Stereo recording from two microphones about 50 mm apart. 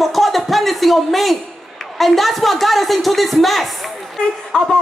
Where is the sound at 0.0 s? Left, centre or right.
Centre.